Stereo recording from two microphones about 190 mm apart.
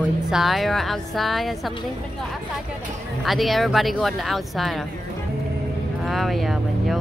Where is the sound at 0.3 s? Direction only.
Centre (ahead or behind).